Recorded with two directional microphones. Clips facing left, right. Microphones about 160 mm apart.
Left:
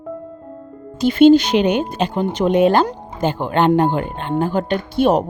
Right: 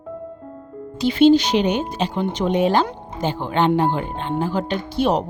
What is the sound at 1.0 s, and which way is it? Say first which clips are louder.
Speech: left 3 dB; 50° left (ahead or behind).